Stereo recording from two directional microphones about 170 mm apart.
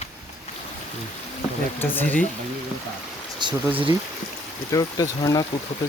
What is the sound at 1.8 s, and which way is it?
Speech, 10° left (ahead or behind).